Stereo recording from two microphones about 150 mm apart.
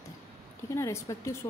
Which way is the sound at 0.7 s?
20° left (ahead or behind).